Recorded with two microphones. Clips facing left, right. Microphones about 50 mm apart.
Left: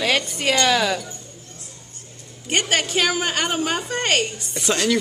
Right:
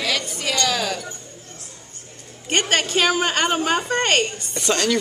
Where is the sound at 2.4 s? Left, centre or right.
Centre.